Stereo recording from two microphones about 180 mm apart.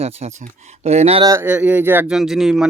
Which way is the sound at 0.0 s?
35° right (ahead or behind).